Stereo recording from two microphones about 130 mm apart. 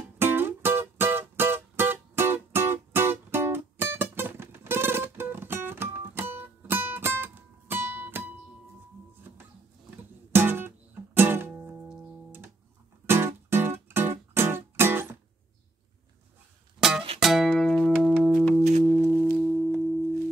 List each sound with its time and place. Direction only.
0.2 s music: 15° right (ahead or behind)
10.3 s music: 15° right (ahead or behind)
17.2 s music: centre (ahead or behind)
18.9 s singing bowl: 15° left (ahead or behind)
19.3 s singing bowl: 5° right (ahead or behind)